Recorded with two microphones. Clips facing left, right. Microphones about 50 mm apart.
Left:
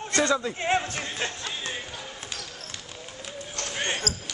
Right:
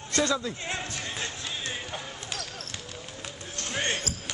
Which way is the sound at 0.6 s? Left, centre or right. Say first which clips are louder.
Left 8 dB; left.